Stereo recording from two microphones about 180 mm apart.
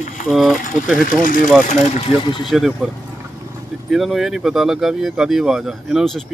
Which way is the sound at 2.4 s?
Centre (ahead or behind).